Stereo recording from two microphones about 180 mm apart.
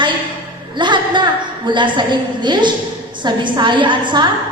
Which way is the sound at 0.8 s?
25° right (ahead or behind).